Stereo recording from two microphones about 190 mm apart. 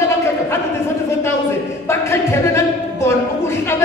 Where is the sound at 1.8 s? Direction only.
15° left (ahead or behind).